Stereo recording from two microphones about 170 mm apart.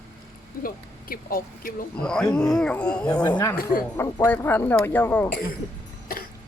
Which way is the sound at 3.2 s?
25° left (ahead or behind).